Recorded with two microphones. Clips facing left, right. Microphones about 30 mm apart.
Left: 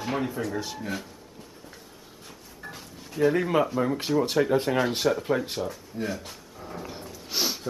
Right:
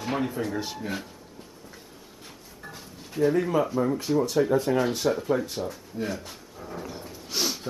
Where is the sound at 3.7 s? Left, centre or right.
Left.